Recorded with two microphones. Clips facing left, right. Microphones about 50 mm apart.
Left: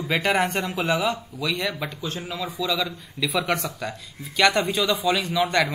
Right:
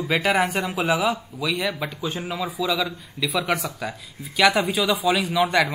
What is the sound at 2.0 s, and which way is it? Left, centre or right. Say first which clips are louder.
Speech: right 4 dB; centre.